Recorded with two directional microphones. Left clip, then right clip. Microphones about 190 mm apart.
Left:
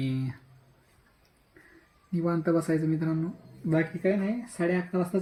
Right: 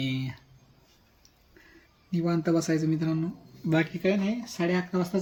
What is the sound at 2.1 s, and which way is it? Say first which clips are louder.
Speech: even; 20° right (ahead or behind).